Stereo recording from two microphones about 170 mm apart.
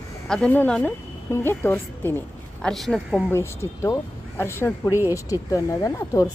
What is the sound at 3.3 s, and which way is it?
A woman's voice, 15° left (ahead or behind).